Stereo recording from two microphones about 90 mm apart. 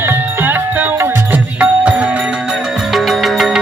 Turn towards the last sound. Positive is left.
turn(degrees=0)  # may be behind; listen again after turning